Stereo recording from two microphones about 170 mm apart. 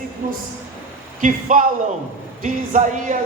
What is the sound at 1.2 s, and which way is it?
Speech, 50° right (ahead or behind).